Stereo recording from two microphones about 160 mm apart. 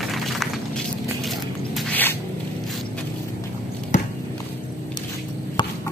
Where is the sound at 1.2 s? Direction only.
Centre (ahead or behind).